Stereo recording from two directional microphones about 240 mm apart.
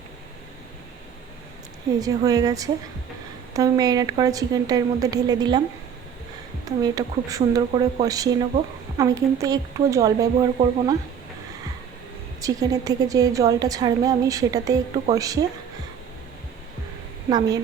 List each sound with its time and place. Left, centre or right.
2.0 s a woman's voice: centre
6.7 s a woman's voice: centre
12.4 s a woman's voice: centre
17.2 s a woman's voice: centre